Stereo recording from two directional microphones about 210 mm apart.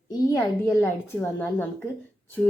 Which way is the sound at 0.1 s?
15° left (ahead or behind).